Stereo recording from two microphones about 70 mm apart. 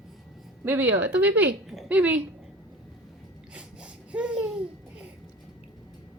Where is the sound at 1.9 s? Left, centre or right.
Right.